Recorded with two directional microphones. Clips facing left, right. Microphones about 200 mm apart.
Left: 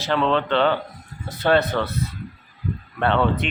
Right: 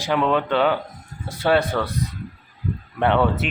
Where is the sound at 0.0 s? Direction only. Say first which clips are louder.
Even; 10° right (ahead or behind).